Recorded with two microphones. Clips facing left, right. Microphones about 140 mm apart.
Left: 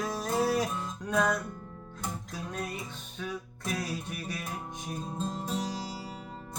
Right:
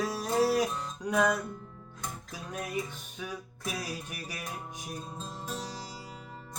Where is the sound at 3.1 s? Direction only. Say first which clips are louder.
Left 3 dB; 10° right (ahead or behind).